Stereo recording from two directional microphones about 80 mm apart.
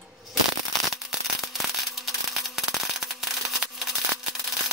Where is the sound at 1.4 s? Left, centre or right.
Centre.